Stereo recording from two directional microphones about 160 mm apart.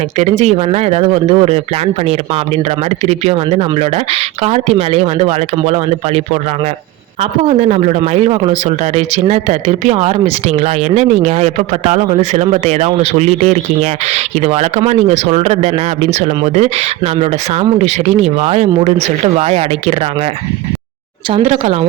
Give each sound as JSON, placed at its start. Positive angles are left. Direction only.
{"t": 0.2, "sound": "speech", "side_deg": -40}
{"t": 3.1, "sound": "speech", "side_deg": -40}
{"t": 21.2, "sound": "speech", "side_deg": -35}